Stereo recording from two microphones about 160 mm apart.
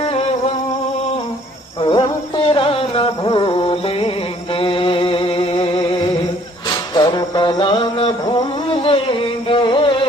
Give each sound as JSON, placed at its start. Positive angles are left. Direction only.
{"t": 0.0, "sound": "music", "side_deg": 35}
{"t": 1.8, "sound": "music", "side_deg": 30}
{"t": 6.9, "sound": "a sound", "side_deg": 30}
{"t": 9.5, "sound": "music", "side_deg": 30}